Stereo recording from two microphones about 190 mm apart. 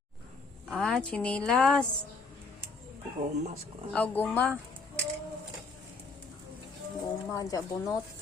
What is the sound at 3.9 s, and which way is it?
Speech, 10° left (ahead or behind).